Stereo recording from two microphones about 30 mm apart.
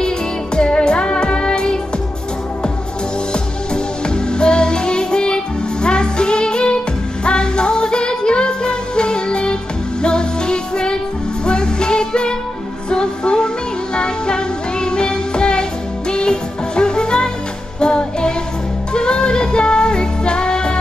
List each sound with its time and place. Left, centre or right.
0.6 s music: left
3.7 s music: left